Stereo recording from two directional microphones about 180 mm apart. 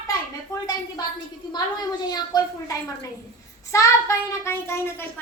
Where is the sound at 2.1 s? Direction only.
20° left (ahead or behind).